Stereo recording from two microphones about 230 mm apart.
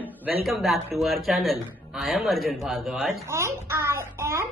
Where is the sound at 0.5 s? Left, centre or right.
Centre.